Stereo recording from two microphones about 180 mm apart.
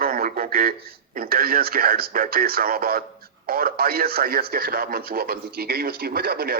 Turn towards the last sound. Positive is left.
turn(degrees=-60)  # may be behind; listen again after turning